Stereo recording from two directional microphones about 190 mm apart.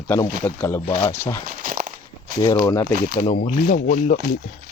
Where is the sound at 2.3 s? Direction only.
20° left (ahead or behind).